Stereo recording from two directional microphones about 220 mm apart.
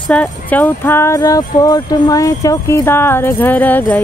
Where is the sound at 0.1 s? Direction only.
5° left (ahead or behind).